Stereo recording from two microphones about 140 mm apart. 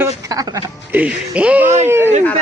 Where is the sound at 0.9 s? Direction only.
10° right (ahead or behind).